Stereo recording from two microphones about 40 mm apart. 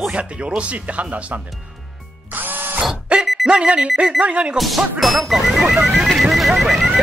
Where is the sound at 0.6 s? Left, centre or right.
Right.